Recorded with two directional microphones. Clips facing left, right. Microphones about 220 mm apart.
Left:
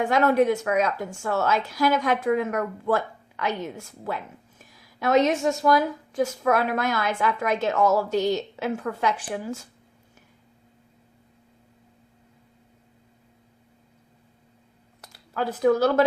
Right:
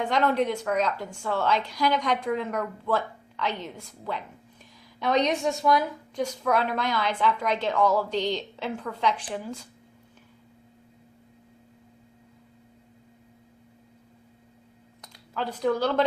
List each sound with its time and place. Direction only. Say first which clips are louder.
0.0 s a woman's voice: left 4 dB; 10° left (ahead or behind)
15.0 s speech: left 4 dB; 10° left (ahead or behind)